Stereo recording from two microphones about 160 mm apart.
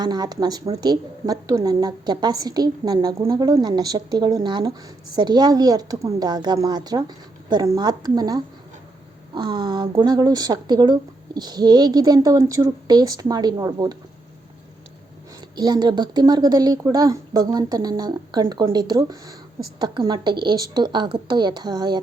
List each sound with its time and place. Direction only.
0.0 s a woman's voice: 25° right (ahead or behind)
15.4 s a woman's voice: 25° right (ahead or behind)